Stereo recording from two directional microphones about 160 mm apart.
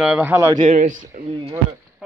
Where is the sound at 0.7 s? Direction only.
50° right (ahead or behind).